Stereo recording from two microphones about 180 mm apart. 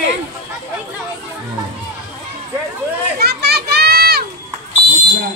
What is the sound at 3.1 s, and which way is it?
Children playing, 60° right (ahead or behind).